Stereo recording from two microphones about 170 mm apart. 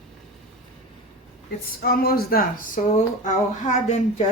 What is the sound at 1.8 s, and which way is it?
Speech, 60° left (ahead or behind).